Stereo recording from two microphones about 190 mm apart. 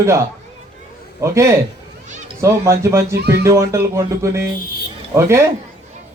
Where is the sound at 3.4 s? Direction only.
15° right (ahead or behind).